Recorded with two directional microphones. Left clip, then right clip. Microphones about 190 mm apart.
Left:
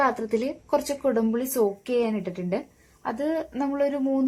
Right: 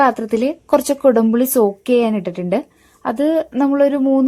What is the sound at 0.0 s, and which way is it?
Speech, 55° right (ahead or behind).